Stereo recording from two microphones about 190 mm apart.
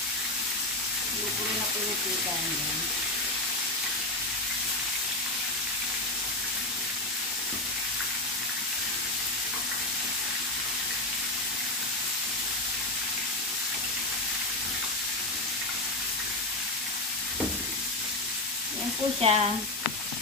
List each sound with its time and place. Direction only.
19.2 s speech: 30° right (ahead or behind)